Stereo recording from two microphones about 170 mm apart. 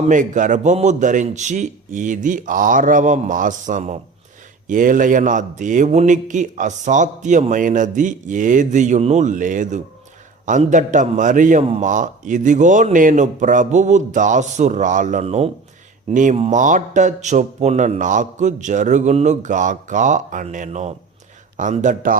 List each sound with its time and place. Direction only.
0.1 s speech: 50° right (ahead or behind)